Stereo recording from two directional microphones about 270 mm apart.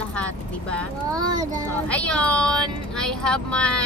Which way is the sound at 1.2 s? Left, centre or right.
Centre.